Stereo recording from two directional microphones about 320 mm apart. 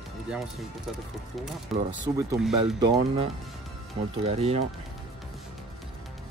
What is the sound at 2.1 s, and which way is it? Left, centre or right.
Speech, centre.